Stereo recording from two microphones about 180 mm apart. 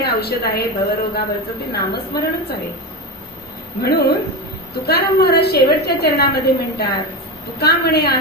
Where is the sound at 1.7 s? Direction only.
60° left (ahead or behind).